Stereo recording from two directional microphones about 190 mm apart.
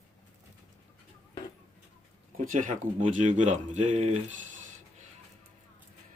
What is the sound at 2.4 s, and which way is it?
Speech, 45° right (ahead or behind).